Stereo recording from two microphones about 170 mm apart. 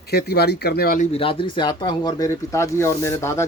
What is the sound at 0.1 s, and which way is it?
Speech, 70° left (ahead or behind).